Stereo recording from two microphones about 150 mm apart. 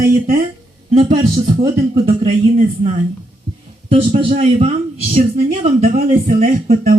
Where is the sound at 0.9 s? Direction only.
45° right (ahead or behind).